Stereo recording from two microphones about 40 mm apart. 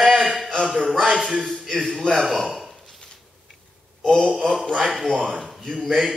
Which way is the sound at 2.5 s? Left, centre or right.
Centre.